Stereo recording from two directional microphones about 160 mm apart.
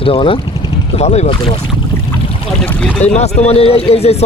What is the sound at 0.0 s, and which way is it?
Speech, 35° left (ahead or behind).